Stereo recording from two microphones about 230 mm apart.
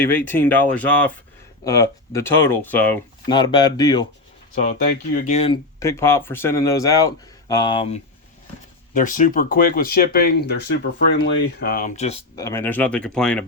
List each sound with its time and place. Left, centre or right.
0.0 s speech: centre
3.2 s speech: centre
4.6 s speech: left
5.8 s speech: centre
9.0 s speech: left
11.6 s speech: left
12.4 s speech: centre